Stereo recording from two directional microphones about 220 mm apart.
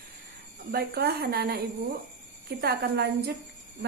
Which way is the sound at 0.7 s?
45° right (ahead or behind).